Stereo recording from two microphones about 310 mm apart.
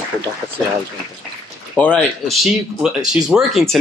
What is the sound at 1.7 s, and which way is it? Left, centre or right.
Speech, centre.